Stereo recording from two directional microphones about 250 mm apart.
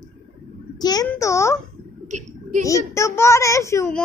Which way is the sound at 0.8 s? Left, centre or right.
Centre.